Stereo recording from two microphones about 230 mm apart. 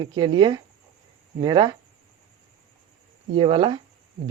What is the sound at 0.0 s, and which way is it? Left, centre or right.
Speech, centre.